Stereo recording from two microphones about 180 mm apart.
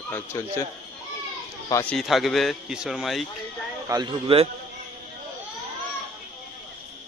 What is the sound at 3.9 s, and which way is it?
Speech, 25° right (ahead or behind).